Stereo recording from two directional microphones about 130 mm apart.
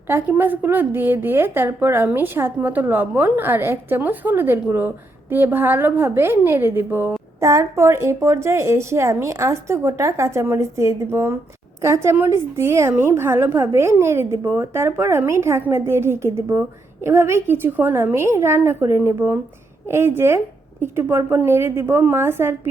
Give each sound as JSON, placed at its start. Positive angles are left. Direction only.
{"t": 0.1, "sound": "a woman's voice", "side_deg": -15}